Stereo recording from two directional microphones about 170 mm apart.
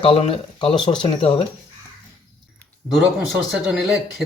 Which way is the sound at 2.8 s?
Centre (ahead or behind).